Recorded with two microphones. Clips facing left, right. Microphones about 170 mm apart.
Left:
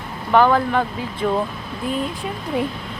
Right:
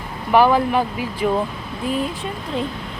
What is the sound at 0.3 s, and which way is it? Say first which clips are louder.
Speech: right 1 dB; 10° right (ahead or behind).